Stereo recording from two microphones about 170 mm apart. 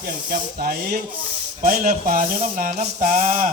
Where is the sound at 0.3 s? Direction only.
55° right (ahead or behind).